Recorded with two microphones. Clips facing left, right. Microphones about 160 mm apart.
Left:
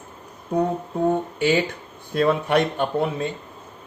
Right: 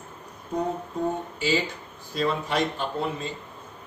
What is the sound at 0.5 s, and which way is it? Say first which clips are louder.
Speech: left 5 dB; 60° left (ahead or behind).